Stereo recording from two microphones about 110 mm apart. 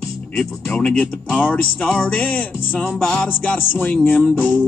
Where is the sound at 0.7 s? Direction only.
10° left (ahead or behind).